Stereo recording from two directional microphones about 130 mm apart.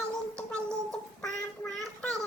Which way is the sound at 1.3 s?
5° left (ahead or behind).